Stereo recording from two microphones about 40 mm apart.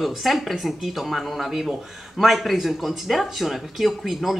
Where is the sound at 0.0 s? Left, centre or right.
Centre.